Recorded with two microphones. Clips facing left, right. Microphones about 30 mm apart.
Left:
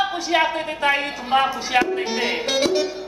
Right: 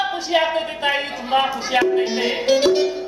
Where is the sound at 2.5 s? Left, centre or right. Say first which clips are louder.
Right 4 dB; right.